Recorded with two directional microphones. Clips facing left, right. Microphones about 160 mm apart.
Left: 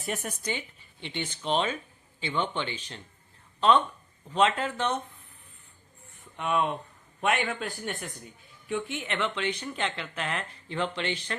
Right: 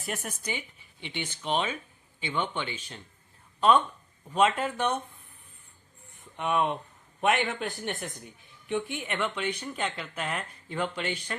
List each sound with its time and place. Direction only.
0.0 s speech: centre (ahead or behind)
4.3 s speech: 10° right (ahead or behind)
6.3 s a man's voice: 15° right (ahead or behind)